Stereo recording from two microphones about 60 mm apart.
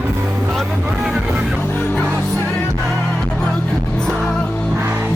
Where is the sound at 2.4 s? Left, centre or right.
Centre.